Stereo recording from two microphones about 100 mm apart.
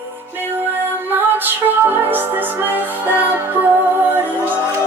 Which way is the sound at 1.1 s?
20° right (ahead or behind).